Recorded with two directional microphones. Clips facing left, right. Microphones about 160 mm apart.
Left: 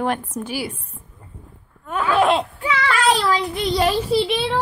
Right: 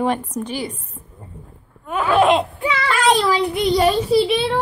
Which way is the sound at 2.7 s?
30° right (ahead or behind).